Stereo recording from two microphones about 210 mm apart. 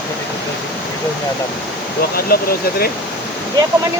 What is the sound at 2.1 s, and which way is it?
Speech, 45° left (ahead or behind).